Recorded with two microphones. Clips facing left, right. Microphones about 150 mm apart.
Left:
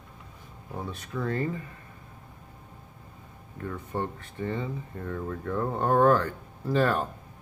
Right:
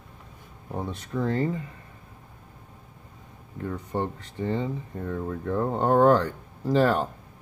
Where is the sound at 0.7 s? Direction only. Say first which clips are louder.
Right 4 dB; 25° right (ahead or behind).